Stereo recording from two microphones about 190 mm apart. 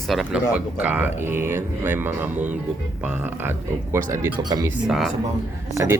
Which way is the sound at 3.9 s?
15° right (ahead or behind).